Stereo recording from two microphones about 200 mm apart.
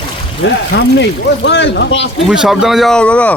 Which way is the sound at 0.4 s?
60° left (ahead or behind).